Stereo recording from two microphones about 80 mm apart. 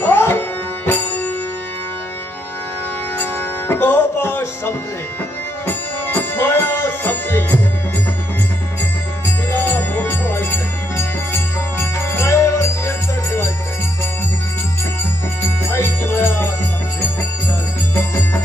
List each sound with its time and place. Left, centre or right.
0.0 s music: left
3.2 s music: left
6.1 s music: left
9.5 s music: left
15.4 s music: left
17.9 s music: left